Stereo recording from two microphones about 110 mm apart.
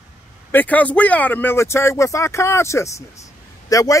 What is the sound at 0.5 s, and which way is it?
Speech, 15° left (ahead or behind).